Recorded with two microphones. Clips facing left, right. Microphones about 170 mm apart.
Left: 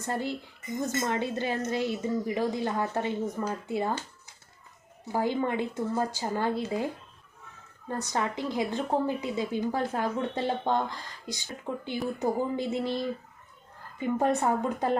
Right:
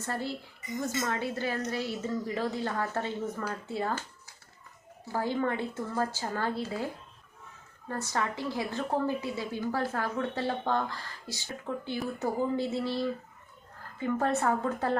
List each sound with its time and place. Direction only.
0.0 s a woman's voice: 15° left (ahead or behind)
5.0 s a woman's voice: 15° left (ahead or behind)
7.9 s a woman's voice: 20° left (ahead or behind)